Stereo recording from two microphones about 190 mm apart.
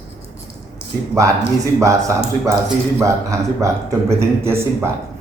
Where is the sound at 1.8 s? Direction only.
15° right (ahead or behind).